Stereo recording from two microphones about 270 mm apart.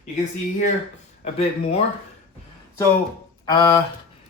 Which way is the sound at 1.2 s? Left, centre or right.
Left.